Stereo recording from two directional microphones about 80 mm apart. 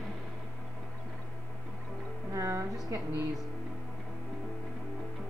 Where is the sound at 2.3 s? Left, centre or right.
Right.